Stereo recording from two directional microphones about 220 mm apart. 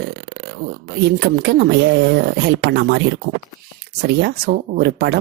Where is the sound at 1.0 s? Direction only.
50° right (ahead or behind).